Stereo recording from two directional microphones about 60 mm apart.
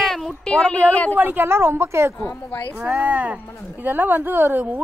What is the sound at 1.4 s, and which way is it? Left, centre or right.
Speech, right.